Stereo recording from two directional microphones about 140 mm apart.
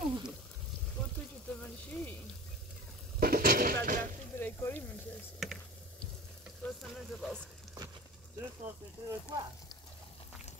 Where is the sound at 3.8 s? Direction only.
75° right (ahead or behind).